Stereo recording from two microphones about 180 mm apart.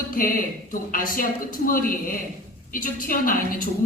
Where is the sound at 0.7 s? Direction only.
50° left (ahead or behind).